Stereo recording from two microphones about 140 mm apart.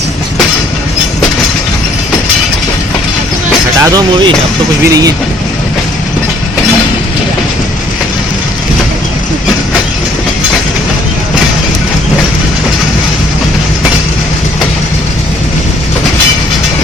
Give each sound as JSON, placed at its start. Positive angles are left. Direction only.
{"t": 3.8, "sound": "speech", "side_deg": -25}